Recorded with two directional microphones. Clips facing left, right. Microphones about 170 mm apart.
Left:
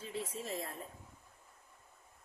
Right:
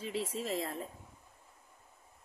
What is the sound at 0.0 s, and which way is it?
Speech, 80° right.